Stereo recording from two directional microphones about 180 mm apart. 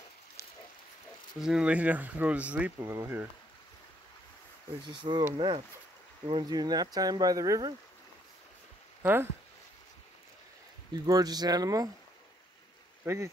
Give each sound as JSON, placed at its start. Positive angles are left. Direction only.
{"t": 0.4, "sound": "pig", "side_deg": 15}
{"t": 1.4, "sound": "speech", "side_deg": -5}
{"t": 4.8, "sound": "speech", "side_deg": -25}
{"t": 6.2, "sound": "speech", "side_deg": -25}
{"t": 9.0, "sound": "speech", "side_deg": -10}
{"t": 10.9, "sound": "speech", "side_deg": -20}
{"t": 13.0, "sound": "speech", "side_deg": -15}